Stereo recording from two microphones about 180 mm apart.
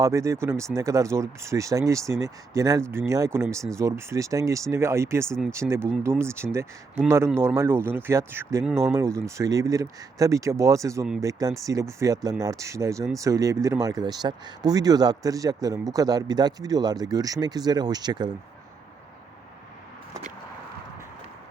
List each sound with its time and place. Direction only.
0.0 s speech: 15° right (ahead or behind)